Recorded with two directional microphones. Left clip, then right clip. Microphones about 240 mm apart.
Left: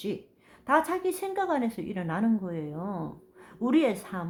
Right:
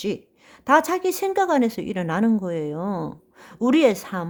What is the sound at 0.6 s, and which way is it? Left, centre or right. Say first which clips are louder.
A woman's voice: right 7 dB; right.